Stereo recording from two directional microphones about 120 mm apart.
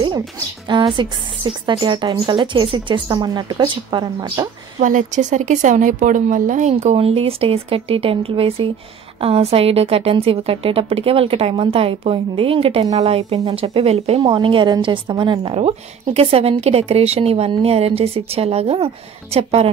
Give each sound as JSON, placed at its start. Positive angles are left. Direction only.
{"t": 0.7, "sound": "speech", "side_deg": -40}
{"t": 4.7, "sound": "a woman's voice", "side_deg": -90}
{"t": 14.2, "sound": "a woman's voice", "side_deg": -45}